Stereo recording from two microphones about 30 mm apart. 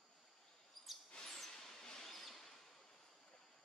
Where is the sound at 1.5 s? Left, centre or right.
Centre.